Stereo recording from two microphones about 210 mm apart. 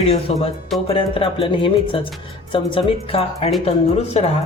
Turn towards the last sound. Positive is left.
turn(degrees=30)  # may be behind; listen again after turning